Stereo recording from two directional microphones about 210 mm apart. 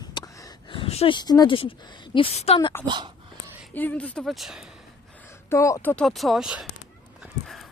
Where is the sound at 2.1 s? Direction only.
30° left (ahead or behind).